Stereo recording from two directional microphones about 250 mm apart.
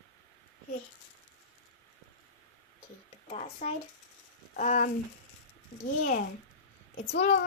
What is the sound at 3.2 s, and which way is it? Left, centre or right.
A woman's voice, left.